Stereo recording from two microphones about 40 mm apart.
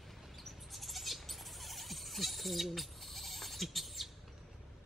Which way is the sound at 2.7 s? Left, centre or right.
Centre.